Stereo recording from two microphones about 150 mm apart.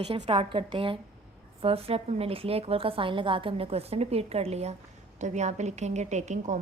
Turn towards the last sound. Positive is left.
turn(degrees=-50)  # may be behind; listen again after turning